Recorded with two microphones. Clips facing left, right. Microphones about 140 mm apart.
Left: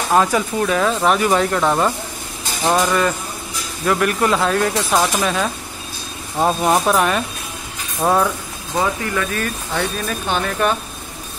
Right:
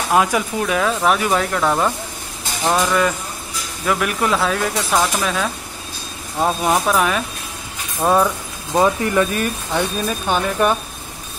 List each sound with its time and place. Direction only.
0.1 s speech: 5° right (ahead or behind)
8.7 s speech: 20° right (ahead or behind)